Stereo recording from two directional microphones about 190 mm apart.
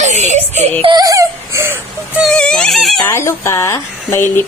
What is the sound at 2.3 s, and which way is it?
Speech, 5° left (ahead or behind).